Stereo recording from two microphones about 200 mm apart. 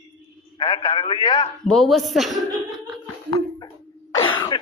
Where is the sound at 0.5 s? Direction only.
25° left (ahead or behind).